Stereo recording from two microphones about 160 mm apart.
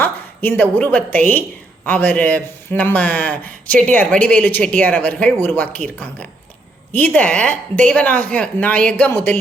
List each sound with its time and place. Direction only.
0.0 s a woman's voice: 10° left (ahead or behind)